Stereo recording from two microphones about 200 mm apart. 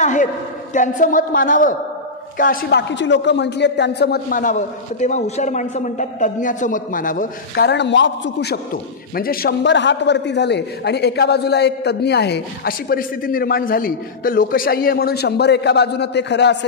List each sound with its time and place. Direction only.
0.0 s a sound: 40° left (ahead or behind)
0.7 s a woman's voice: 40° left (ahead or behind); by 8.5 s 60° left (ahead or behind)
9.1 s a man's voice: 50° left (ahead or behind)